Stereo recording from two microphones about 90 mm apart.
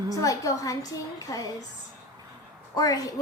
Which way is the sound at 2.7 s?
45° left (ahead or behind).